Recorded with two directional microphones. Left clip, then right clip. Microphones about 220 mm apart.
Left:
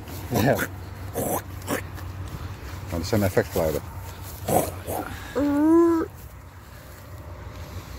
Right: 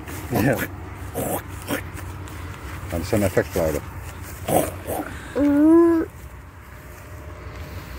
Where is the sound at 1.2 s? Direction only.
Centre (ahead or behind).